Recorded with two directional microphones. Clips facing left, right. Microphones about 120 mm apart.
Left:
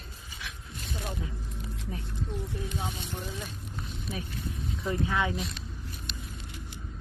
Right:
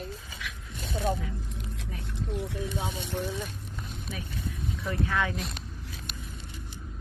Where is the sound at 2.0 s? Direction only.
75° right (ahead or behind).